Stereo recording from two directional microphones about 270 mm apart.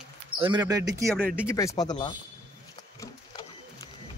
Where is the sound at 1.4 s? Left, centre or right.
Centre.